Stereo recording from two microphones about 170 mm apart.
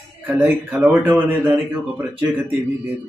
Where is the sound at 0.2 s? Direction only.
10° right (ahead or behind).